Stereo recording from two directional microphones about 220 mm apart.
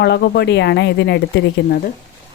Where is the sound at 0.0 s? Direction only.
50° left (ahead or behind).